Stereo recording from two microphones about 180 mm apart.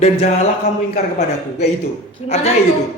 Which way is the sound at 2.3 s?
35° left (ahead or behind).